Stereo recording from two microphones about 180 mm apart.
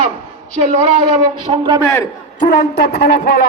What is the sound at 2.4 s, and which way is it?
A man's voice, 45° left (ahead or behind).